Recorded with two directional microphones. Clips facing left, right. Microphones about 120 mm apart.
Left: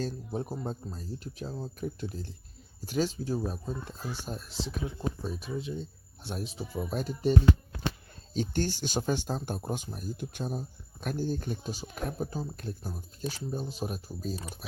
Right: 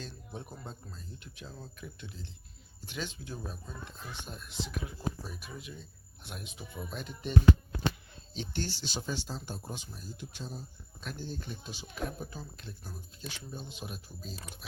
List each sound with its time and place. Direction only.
0.0 s speech: 40° left (ahead or behind)